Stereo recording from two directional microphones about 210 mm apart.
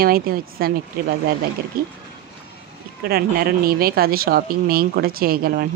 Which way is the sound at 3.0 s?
45° right (ahead or behind).